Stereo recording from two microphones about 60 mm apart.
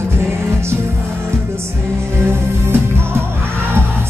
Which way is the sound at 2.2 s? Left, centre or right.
Right.